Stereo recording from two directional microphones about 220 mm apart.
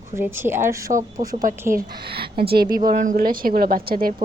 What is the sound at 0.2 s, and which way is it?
Speech, 10° right (ahead or behind).